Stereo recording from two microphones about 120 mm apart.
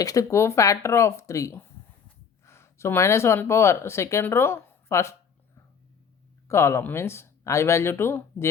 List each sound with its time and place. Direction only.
0.0 s speech: 30° left (ahead or behind)
6.5 s speech: 20° left (ahead or behind)